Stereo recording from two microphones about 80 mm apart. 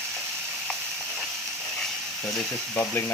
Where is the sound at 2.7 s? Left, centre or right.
Centre.